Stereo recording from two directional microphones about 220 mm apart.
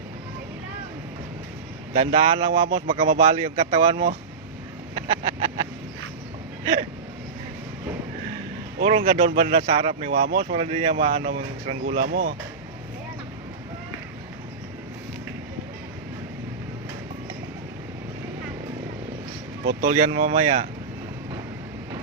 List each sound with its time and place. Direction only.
1.9 s speech: 25° right (ahead or behind)
4.9 s a sound: 30° right (ahead or behind)
8.8 s speech: 25° right (ahead or behind)
12.0 s speech: 45° right (ahead or behind)
19.8 s speech: 25° right (ahead or behind)